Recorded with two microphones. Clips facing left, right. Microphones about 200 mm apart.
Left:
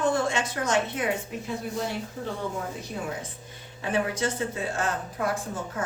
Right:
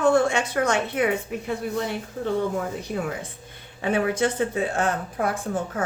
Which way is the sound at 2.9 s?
60° right (ahead or behind).